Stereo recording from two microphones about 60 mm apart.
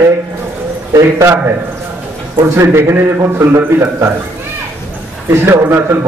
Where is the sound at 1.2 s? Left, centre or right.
Right.